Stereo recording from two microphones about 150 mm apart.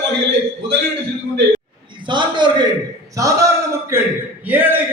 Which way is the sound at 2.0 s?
30° right (ahead or behind).